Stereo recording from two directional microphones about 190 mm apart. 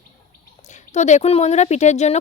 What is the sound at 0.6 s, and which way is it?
Speech, 40° left (ahead or behind).